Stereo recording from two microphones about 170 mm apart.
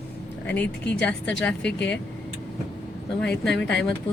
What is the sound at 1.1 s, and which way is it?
Speech, 5° left (ahead or behind).